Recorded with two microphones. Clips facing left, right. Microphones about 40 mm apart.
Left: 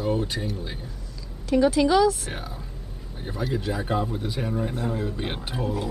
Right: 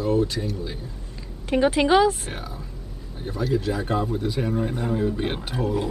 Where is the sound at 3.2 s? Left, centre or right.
Centre.